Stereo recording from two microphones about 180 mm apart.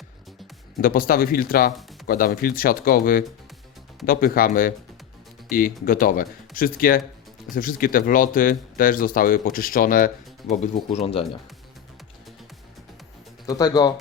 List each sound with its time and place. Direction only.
0.8 s speech: 55° left (ahead or behind)
10.8 s speech: 35° left (ahead or behind)
13.5 s speech: 20° left (ahead or behind)